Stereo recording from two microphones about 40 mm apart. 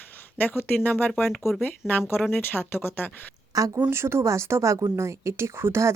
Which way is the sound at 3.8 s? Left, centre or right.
Right.